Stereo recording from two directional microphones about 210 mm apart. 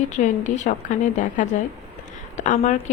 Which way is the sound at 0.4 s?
35° left (ahead or behind).